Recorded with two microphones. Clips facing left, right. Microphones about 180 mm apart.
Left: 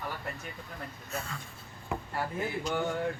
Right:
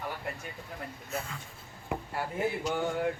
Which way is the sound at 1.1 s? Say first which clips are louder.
Right 1 dB; 20° right (ahead or behind).